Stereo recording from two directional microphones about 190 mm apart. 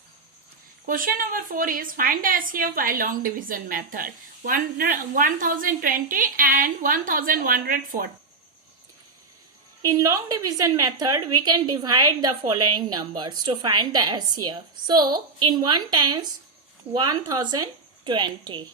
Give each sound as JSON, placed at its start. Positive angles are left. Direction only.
{"t": 0.9, "sound": "a woman's voice", "side_deg": -45}
{"t": 9.8, "sound": "a woman's voice", "side_deg": -15}